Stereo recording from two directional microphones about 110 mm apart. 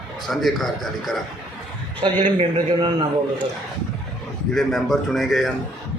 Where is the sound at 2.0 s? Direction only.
50° right (ahead or behind).